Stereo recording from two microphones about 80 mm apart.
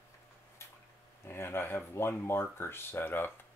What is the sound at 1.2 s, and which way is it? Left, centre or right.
Speech, left.